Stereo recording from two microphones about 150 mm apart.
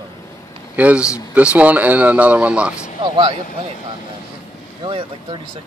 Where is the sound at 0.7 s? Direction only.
10° right (ahead or behind).